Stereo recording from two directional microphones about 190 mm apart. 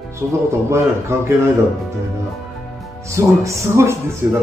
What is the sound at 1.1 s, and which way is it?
Speech, 15° right (ahead or behind).